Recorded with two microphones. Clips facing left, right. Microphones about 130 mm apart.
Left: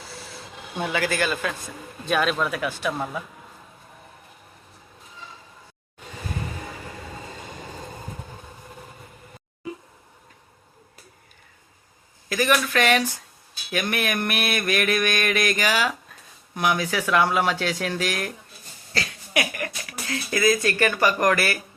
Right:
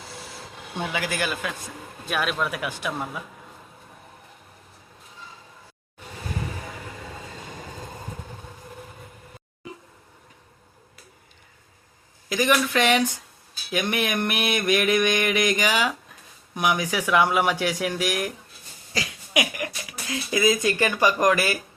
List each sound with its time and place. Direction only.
0.9 s speech: 10° right (ahead or behind)
12.3 s speech: 15° right (ahead or behind)